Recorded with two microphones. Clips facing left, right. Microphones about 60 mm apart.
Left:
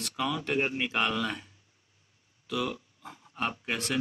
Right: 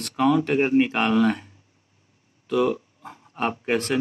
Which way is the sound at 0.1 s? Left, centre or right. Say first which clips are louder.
Right 10 dB; right.